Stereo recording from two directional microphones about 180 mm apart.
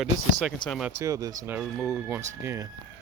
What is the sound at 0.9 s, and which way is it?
Speech, 15° right (ahead or behind).